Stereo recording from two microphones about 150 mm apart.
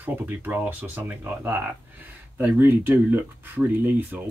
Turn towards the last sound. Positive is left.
turn(degrees=-10)  # may be behind; listen again after turning